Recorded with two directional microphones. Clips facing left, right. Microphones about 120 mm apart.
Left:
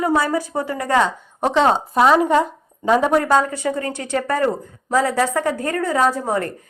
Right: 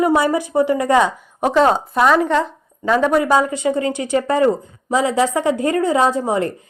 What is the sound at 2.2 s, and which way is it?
Speech, 10° left (ahead or behind).